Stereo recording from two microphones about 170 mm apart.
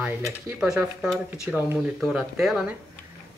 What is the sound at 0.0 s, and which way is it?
Speech, 20° right (ahead or behind).